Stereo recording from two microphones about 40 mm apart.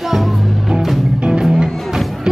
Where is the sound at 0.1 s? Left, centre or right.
Centre.